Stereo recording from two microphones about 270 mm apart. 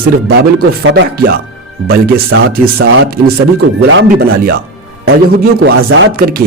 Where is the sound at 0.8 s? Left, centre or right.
Right.